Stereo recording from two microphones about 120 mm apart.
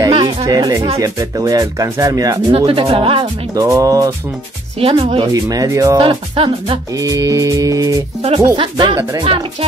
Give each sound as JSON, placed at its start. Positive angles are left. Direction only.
{"t": 0.1, "sound": "music", "side_deg": -50}
{"t": 0.5, "sound": "speech", "side_deg": -30}
{"t": 2.5, "sound": "music", "side_deg": -50}
{"t": 3.5, "sound": "speech", "side_deg": -25}
{"t": 4.7, "sound": "music", "side_deg": -55}
{"t": 5.3, "sound": "speech", "side_deg": -30}
{"t": 5.9, "sound": "music", "side_deg": -45}
{"t": 7.0, "sound": "speech", "side_deg": -30}
{"t": 8.5, "sound": "music", "side_deg": -45}